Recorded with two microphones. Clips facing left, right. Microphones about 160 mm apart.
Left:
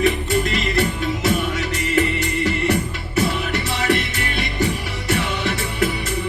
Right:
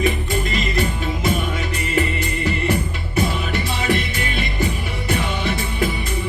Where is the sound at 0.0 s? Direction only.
70° left (ahead or behind).